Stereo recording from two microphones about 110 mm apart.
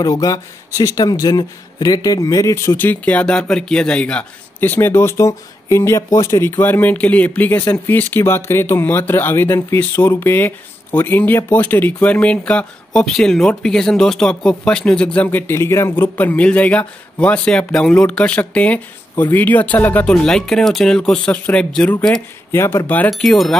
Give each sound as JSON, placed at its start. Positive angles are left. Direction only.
{"t": 0.0, "sound": "speech", "side_deg": 30}
{"t": 22.5, "sound": "speech", "side_deg": 20}
{"t": 23.0, "sound": "speech", "side_deg": 0}